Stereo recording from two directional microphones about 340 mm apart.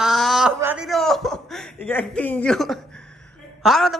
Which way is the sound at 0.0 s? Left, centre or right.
Centre.